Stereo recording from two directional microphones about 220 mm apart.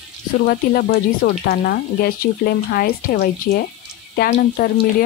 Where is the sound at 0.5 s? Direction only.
45° left (ahead or behind).